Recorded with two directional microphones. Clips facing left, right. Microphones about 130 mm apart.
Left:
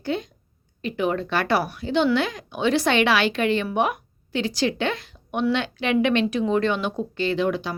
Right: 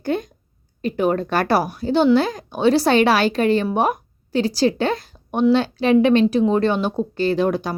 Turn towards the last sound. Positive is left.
turn(degrees=-40)  # may be behind; listen again after turning